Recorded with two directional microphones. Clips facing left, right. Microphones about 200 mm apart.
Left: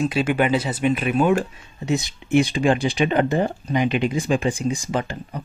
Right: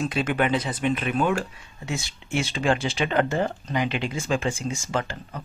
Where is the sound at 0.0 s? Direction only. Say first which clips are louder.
Left 4 dB; 5° left (ahead or behind).